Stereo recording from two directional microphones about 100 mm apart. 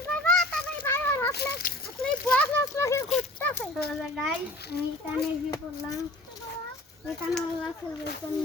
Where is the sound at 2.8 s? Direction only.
30° left (ahead or behind).